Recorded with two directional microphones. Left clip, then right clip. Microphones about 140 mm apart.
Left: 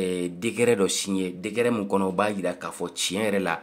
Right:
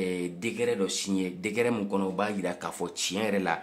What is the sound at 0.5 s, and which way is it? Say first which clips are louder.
Speech: left 7 dB; 45° left (ahead or behind).